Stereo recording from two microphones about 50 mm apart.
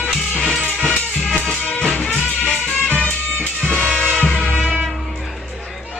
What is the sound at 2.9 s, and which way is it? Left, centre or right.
Music, left.